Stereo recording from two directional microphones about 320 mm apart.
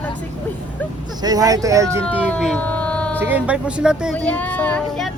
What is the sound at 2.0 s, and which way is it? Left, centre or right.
Speech, centre.